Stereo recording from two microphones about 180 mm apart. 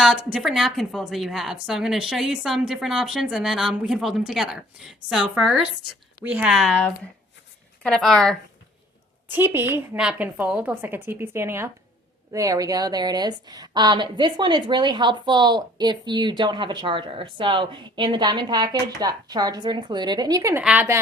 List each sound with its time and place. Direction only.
0.0 s a woman's voice: centre (ahead or behind)
9.3 s a woman's voice: 10° right (ahead or behind)